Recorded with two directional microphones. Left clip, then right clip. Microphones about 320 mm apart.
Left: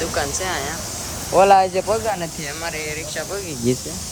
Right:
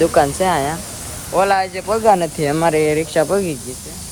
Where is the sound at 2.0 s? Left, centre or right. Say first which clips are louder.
Right 10 dB; centre.